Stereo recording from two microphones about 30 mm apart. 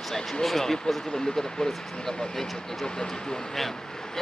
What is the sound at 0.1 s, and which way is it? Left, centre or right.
A man's voice, centre.